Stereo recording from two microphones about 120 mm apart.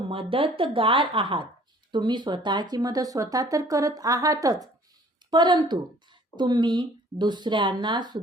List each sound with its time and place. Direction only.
0.1 s speech: 50° right (ahead or behind)